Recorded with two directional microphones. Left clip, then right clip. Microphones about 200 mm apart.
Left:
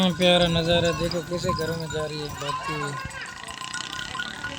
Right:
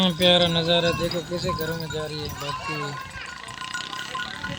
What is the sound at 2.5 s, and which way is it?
Speech, 55° right (ahead or behind).